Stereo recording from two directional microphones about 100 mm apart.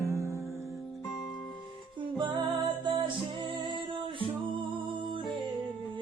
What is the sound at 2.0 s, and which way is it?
Music, 50° right (ahead or behind).